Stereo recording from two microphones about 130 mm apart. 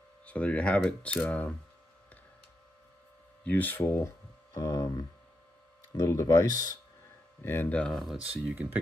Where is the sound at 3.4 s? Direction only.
15° left (ahead or behind).